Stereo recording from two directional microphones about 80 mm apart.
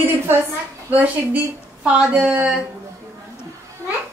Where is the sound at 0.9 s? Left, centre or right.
Centre.